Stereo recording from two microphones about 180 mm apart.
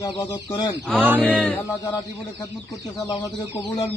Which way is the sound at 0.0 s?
20° left (ahead or behind).